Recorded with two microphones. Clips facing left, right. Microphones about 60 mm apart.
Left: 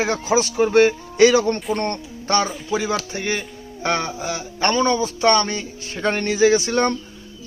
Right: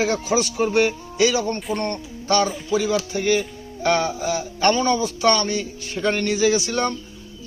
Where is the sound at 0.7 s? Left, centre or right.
Left.